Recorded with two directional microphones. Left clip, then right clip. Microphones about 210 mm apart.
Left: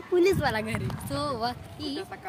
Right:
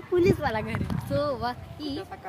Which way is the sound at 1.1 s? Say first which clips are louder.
Right 2 dB; 40° left (ahead or behind).